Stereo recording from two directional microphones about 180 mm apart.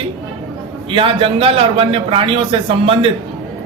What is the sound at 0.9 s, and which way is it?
Speech, 30° right (ahead or behind).